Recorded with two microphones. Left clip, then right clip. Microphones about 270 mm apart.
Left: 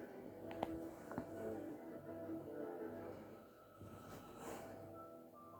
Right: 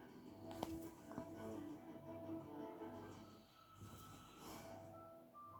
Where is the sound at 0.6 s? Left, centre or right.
Centre.